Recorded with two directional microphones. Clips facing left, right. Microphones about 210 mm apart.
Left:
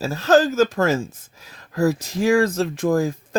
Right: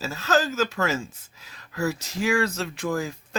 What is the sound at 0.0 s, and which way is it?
Speech, 50° left (ahead or behind).